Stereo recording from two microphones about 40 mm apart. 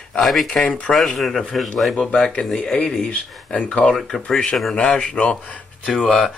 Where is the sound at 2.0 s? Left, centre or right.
Left.